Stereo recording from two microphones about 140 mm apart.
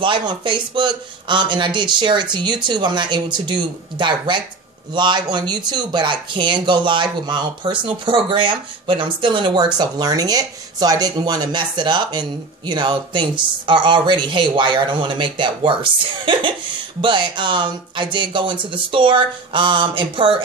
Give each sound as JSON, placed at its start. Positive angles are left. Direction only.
{"t": 0.0, "sound": "speech", "side_deg": -35}
{"t": 4.9, "sound": "speech", "side_deg": -35}